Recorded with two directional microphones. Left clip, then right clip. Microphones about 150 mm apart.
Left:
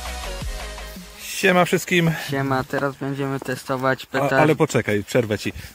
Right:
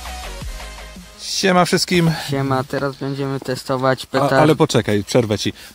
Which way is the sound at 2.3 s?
40° right (ahead or behind).